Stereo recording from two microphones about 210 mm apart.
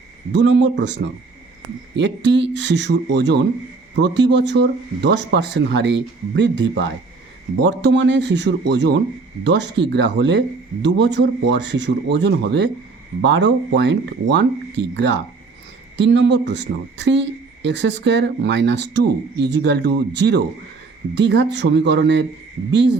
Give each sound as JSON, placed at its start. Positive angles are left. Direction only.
{"t": 0.3, "sound": "speech", "side_deg": -60}